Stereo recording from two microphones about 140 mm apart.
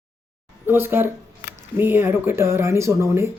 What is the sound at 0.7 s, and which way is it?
Speech, 15° right (ahead or behind).